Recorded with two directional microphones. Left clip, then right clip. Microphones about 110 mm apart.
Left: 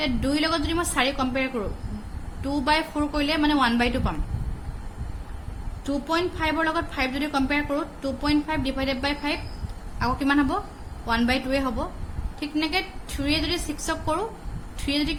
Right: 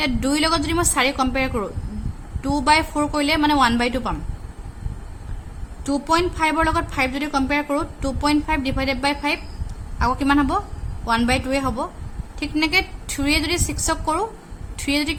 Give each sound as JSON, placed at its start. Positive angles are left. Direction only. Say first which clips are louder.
{"t": 0.0, "sound": "a woman's voice", "louder": "right 4 dB", "side_deg": -70}
{"t": 5.8, "sound": "a woman's voice", "louder": "right 6 dB", "side_deg": -70}
{"t": 7.7, "sound": "a woman's voice", "louder": "right 4 dB", "side_deg": -65}